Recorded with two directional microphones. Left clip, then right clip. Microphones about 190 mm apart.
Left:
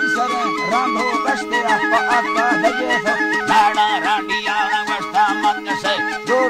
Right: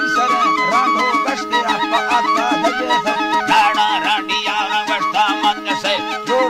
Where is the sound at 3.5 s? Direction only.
50° left (ahead or behind).